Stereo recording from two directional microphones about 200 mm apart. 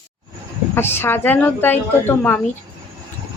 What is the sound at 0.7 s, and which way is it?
A woman's voice, 10° left (ahead or behind).